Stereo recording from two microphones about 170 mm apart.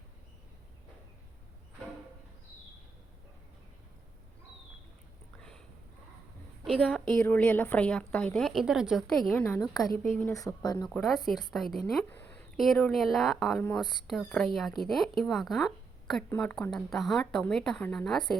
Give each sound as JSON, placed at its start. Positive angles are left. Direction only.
{"t": 5.4, "sound": "a sound", "side_deg": 5}
{"t": 7.2, "sound": "a woman's voice", "side_deg": 10}
{"t": 9.4, "sound": "speech", "side_deg": 20}
{"t": 10.8, "sound": "a woman's voice", "side_deg": 0}
{"t": 12.0, "sound": "a sound", "side_deg": 10}
{"t": 12.5, "sound": "a woman's voice", "side_deg": 0}
{"t": 13.6, "sound": "speech", "side_deg": 10}
{"t": 13.8, "sound": "a woman's voice", "side_deg": 0}